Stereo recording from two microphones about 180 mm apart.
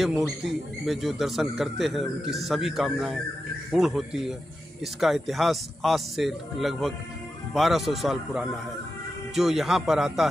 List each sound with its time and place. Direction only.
0.0 s speech: centre (ahead or behind)